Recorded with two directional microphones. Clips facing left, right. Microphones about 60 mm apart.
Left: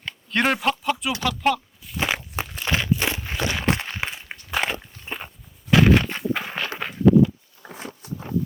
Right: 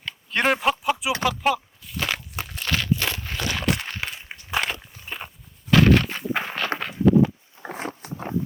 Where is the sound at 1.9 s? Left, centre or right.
Centre.